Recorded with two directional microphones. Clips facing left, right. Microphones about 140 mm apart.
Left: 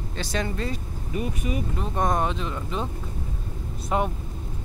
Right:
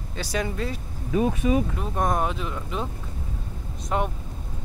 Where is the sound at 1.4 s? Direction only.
90° right.